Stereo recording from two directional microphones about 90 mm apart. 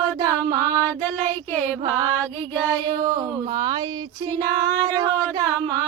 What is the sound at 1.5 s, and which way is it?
Music, 20° left (ahead or behind).